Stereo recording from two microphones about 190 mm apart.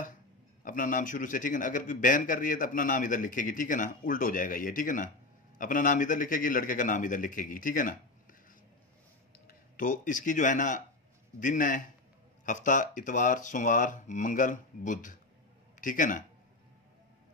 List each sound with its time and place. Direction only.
0.7 s speech: 45° left (ahead or behind)
9.5 s speech: 45° left (ahead or behind)